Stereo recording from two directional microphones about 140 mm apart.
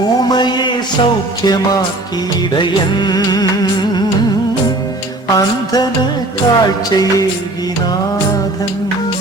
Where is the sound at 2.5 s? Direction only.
30° left (ahead or behind).